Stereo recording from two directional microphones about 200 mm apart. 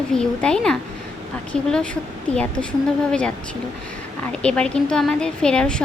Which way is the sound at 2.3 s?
5° left (ahead or behind).